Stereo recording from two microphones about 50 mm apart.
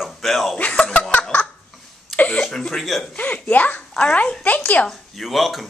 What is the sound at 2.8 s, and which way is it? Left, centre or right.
Speech, centre.